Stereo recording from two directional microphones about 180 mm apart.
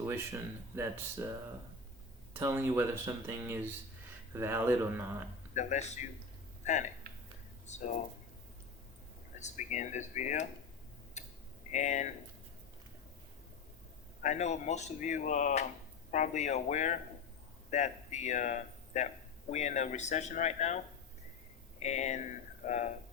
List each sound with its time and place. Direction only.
0.8 s speech: 15° right (ahead or behind)
2.3 s speech: 15° right (ahead or behind)
5.5 s speech: 40° left (ahead or behind)
7.7 s speech: 45° left (ahead or behind)
9.4 s speech: 40° left (ahead or behind)
11.2 s tick: 40° left (ahead or behind)
11.7 s speech: 40° left (ahead or behind)
14.2 s speech: 40° left (ahead or behind)
21.8 s speech: 40° left (ahead or behind)